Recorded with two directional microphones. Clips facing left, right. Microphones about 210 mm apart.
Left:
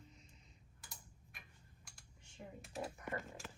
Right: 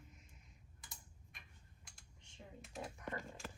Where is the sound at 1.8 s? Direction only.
Centre (ahead or behind).